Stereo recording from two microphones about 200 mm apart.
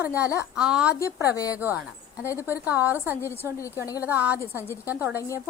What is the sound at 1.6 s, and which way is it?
Speech, 10° right (ahead or behind).